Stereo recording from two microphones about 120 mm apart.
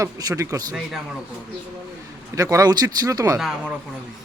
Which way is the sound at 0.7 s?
5° right (ahead or behind).